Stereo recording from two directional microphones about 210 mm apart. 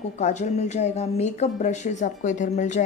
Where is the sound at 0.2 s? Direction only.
35° left (ahead or behind).